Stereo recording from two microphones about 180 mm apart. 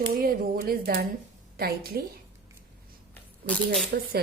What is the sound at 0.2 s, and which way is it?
Speech, 55° right (ahead or behind).